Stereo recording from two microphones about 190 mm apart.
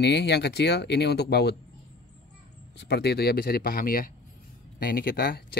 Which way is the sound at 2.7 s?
60° left (ahead or behind).